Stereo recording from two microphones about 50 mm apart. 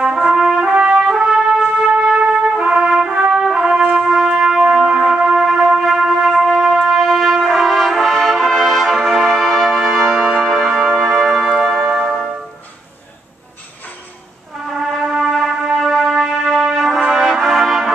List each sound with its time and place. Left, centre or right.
0.0 s trumpet: centre
1.1 s trumpet: centre
2.1 s music: right
2.9 s brass instrument: centre
4.3 s music: centre
7.4 s brass instrument: centre
9.8 s music: centre
10.7 s music: centre
14.7 s music: centre